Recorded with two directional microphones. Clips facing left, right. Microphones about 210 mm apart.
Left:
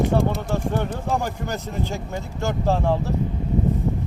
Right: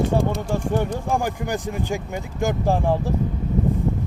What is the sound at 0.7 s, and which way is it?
Speech, 10° right (ahead or behind).